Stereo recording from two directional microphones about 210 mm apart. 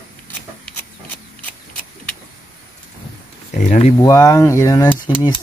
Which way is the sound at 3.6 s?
35° left (ahead or behind).